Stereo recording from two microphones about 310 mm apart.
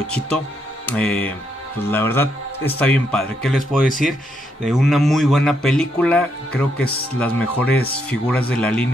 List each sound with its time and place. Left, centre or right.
0.0 s speech: centre